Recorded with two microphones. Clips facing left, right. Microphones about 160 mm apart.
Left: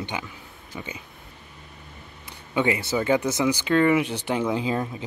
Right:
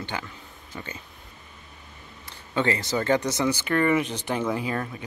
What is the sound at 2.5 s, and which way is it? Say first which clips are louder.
Speech: left 2 dB; 15° left (ahead or behind).